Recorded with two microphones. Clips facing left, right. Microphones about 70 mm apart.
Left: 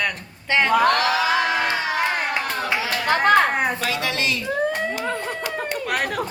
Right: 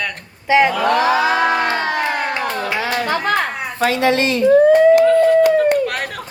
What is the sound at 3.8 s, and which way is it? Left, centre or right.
Speech, right.